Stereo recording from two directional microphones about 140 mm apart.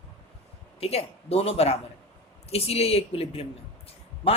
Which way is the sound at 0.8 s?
45° left (ahead or behind).